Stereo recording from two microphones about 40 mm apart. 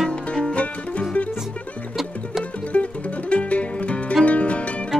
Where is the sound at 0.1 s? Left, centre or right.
Left.